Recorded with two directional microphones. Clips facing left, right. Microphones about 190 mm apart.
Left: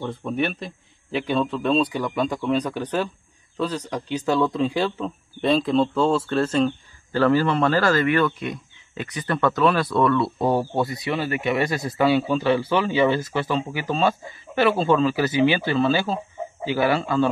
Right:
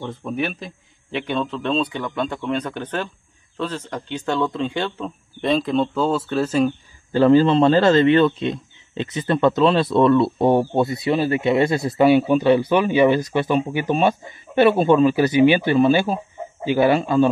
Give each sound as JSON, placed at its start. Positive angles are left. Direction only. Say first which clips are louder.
{"t": 0.0, "sound": "speech", "louder": "even", "side_deg": 0}
{"t": 7.1, "sound": "speech", "louder": "right 5 dB", "side_deg": -20}